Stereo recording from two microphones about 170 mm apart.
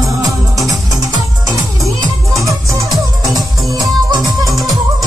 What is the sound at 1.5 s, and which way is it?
Music, 20° right (ahead or behind).